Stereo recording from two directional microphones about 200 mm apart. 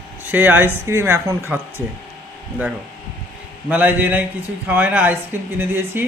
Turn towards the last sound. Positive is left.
turn(degrees=-10)  # may be behind; listen again after turning